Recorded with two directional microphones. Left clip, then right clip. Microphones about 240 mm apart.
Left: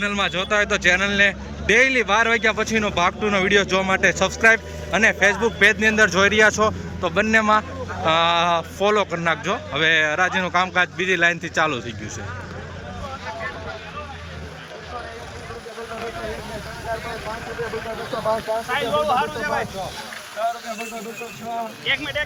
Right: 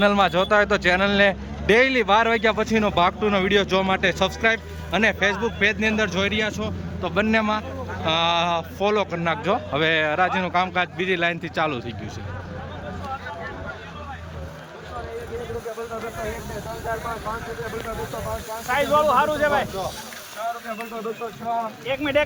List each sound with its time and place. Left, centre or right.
0.0 s a man's voice: centre
18.7 s speech: right
21.8 s speech: right